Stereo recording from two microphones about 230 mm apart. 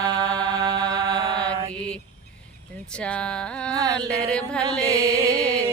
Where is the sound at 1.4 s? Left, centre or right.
Centre.